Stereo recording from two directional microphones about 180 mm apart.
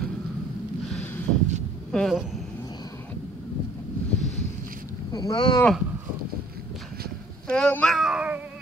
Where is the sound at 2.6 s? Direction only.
20° left (ahead or behind).